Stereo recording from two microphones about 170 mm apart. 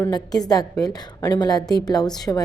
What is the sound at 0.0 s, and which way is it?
A woman's voice, 20° left (ahead or behind).